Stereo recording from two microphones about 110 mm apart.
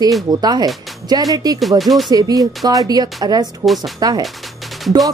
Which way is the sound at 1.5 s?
Centre (ahead or behind).